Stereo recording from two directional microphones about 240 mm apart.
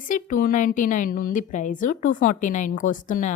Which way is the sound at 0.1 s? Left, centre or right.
Left.